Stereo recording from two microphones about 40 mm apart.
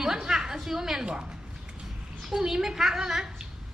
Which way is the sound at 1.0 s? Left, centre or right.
Right.